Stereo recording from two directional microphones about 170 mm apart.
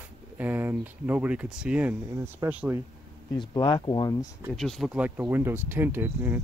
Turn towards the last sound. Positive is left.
turn(degrees=-10)  # may be behind; listen again after turning